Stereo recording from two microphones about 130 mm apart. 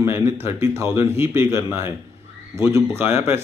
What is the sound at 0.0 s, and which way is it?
A man's voice, 20° right (ahead or behind).